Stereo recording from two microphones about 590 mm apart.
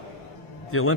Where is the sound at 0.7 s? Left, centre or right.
Left.